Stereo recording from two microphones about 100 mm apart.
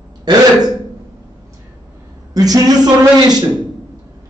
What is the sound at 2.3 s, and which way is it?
A man's voice, 40° right (ahead or behind).